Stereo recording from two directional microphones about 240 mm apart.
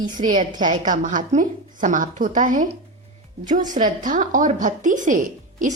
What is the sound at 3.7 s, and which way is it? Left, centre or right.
A woman's voice, right.